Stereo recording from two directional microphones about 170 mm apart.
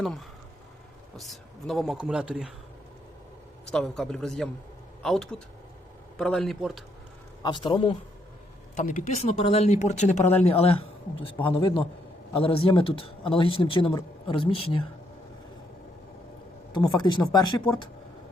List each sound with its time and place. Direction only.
0.0 s a man's voice: centre (ahead or behind)
3.7 s a man's voice: 5° left (ahead or behind)
7.4 s speech: 25° left (ahead or behind)
8.7 s a man's voice: 45° left (ahead or behind)
16.7 s speech: 25° left (ahead or behind)